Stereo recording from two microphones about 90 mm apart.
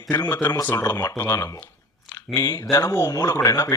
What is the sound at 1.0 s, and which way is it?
Speech, 35° left (ahead or behind).